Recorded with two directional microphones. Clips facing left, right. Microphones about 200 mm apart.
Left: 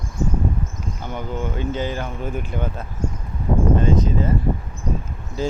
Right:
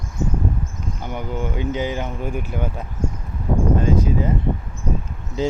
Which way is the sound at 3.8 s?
10° right (ahead or behind).